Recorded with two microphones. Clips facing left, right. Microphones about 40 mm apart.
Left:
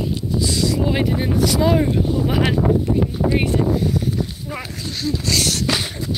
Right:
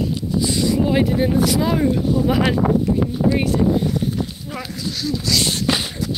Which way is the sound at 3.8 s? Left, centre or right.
Right.